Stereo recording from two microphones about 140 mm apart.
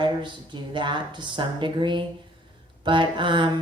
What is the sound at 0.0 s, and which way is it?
Speech, 35° right (ahead or behind).